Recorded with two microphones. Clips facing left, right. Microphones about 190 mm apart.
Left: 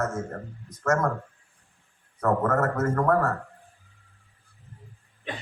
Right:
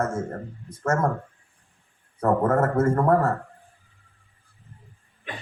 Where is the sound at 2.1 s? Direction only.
30° right (ahead or behind).